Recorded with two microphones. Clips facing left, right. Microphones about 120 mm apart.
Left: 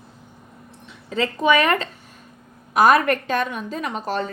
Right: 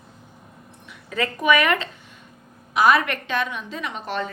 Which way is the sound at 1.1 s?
30° left (ahead or behind).